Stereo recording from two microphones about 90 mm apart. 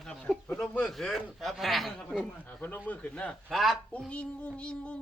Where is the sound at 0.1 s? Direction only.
10° left (ahead or behind).